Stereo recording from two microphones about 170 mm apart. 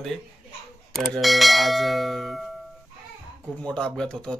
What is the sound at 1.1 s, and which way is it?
Speech, centre (ahead or behind).